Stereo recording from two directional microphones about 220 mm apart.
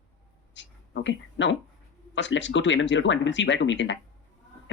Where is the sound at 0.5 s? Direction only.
55° left (ahead or behind).